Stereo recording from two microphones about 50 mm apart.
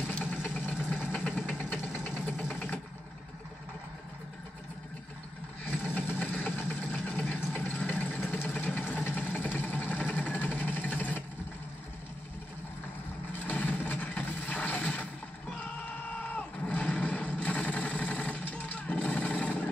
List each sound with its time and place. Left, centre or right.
0.0 s vehicle: left
5.7 s vehicle: left
13.3 s vehicle: left
16.3 s vehicle: left